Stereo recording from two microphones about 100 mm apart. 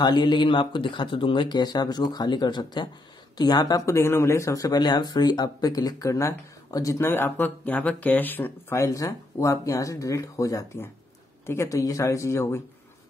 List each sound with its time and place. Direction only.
0.0 s speech: 50° left (ahead or behind)
3.8 s speech: 30° left (ahead or behind)